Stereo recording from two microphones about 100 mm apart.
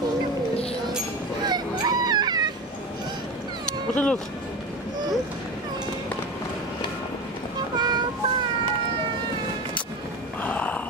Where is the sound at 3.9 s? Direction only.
10° left (ahead or behind).